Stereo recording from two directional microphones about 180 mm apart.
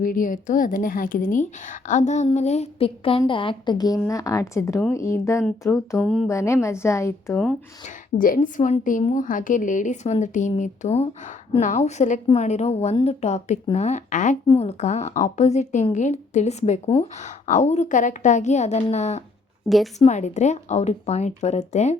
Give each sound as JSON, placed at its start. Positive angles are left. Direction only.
{"t": 0.0, "sound": "a woman's voice", "side_deg": 50}
{"t": 6.0, "sound": "speech", "side_deg": 5}
{"t": 6.2, "sound": "a woman's voice", "side_deg": 15}
{"t": 7.9, "sound": "a woman's voice", "side_deg": 50}
{"t": 19.6, "sound": "speech", "side_deg": 0}
{"t": 20.0, "sound": "a woman's voice", "side_deg": 40}